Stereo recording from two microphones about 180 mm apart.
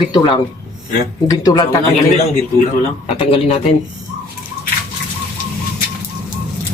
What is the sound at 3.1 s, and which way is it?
Speech, 30° left (ahead or behind).